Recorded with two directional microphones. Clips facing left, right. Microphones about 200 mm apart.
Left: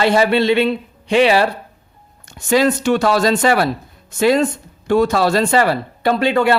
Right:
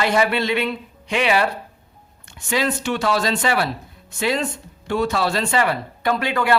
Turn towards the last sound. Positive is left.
turn(degrees=30)  # may be behind; listen again after turning